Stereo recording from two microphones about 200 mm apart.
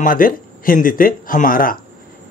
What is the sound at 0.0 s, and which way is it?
Speech, 45° left (ahead or behind).